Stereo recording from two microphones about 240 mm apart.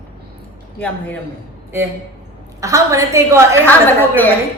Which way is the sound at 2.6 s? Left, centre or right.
Centre.